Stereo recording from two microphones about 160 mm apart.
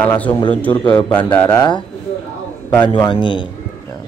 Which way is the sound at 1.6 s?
30° left (ahead or behind).